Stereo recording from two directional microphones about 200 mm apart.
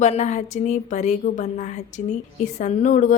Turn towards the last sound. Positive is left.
turn(degrees=40)  # may be behind; listen again after turning